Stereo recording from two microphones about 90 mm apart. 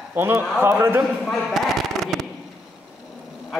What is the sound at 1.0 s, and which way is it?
Speech, centre (ahead or behind).